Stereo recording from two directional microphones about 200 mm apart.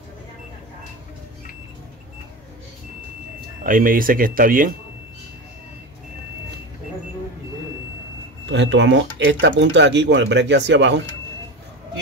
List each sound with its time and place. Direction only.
3.6 s speech: 45° right (ahead or behind)
8.5 s speech: 65° right (ahead or behind)